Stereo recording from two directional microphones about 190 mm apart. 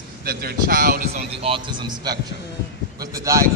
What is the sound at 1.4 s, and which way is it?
Speech, 25° right (ahead or behind).